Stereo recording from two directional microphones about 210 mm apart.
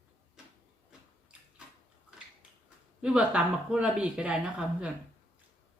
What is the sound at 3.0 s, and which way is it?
Speech, 5° right (ahead or behind).